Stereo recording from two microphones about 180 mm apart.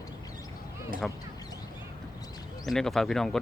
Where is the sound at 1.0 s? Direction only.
5° left (ahead or behind).